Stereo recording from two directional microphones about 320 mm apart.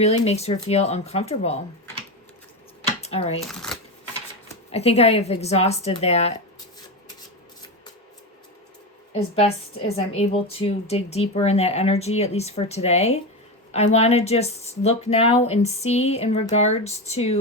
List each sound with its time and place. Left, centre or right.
0.0 s speech: centre
3.0 s a sound: centre
3.5 s speech: centre
4.4 s speech: centre
10.1 s speech: centre